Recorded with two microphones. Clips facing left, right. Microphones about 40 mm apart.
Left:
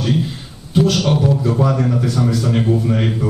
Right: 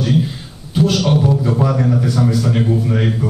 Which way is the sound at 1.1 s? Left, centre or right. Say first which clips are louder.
Right 1 dB; centre.